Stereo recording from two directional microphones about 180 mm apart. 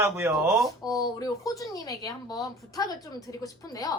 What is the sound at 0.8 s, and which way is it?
A woman's voice, 20° left (ahead or behind).